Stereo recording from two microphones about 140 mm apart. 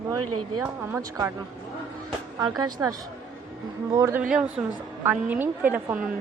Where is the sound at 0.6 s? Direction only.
20° right (ahead or behind).